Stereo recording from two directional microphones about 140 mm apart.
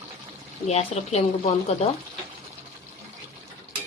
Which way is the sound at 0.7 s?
50° left (ahead or behind).